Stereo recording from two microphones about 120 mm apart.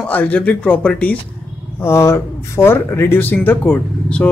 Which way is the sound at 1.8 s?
20° left (ahead or behind).